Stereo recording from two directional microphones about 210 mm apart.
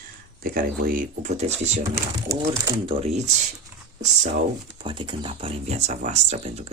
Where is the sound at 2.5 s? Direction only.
25° right (ahead or behind).